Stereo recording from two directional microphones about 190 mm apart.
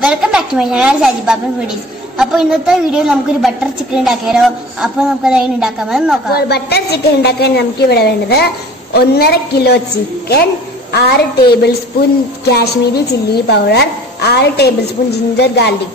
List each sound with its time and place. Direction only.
0.0 s a woman's voice: 5° right (ahead or behind)
6.3 s a woman's voice: 60° left (ahead or behind)
10.9 s a woman's voice: 60° left (ahead or behind)